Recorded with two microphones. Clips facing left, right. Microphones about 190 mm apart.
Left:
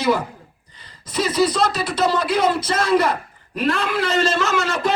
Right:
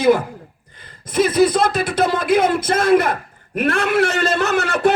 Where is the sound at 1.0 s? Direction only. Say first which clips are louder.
Right 4 dB; 55° right (ahead or behind).